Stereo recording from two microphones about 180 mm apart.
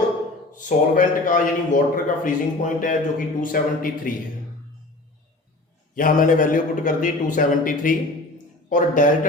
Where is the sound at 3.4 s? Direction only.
50° left (ahead or behind).